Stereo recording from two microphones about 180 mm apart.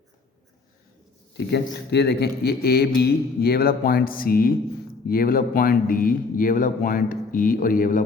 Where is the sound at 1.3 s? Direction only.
65° left (ahead or behind).